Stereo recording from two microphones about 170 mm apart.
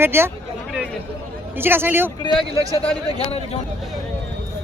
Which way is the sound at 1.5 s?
10° right (ahead or behind).